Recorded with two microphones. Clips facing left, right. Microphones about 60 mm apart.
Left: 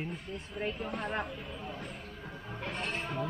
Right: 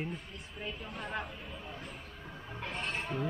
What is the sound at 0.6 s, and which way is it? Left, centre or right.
Speech, left.